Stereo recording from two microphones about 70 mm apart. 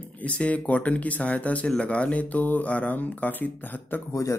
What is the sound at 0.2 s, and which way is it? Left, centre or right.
Speech, centre.